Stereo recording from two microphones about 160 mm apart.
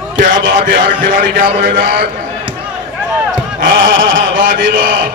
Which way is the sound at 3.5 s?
60° right (ahead or behind).